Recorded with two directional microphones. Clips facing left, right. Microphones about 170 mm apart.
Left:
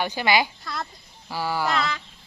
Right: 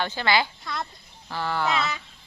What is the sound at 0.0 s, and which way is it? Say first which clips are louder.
Speech: left 2 dB; 15° left (ahead or behind).